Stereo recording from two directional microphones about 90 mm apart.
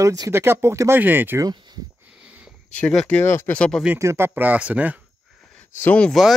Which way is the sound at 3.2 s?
30° left (ahead or behind).